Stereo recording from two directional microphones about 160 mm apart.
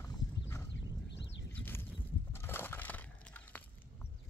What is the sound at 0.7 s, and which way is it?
Clip-clop, 90° left.